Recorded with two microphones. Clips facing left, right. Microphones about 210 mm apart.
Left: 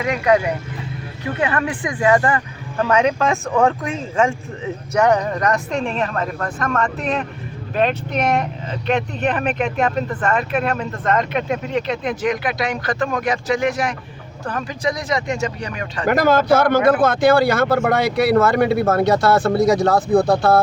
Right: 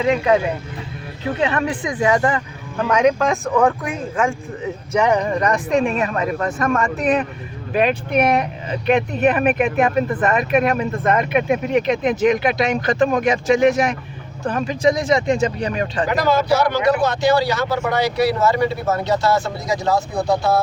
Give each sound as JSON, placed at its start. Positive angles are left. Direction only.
{"t": 1.4, "sound": "speech", "side_deg": -25}
{"t": 2.8, "sound": "speech", "side_deg": -5}
{"t": 5.0, "sound": "speech", "side_deg": -10}
{"t": 16.0, "sound": "a man's voice", "side_deg": 50}